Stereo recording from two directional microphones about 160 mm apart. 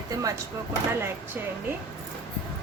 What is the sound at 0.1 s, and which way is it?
Speech, 20° right (ahead or behind).